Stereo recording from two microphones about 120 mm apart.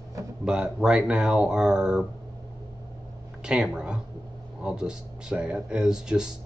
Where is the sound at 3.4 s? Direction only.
5° right (ahead or behind).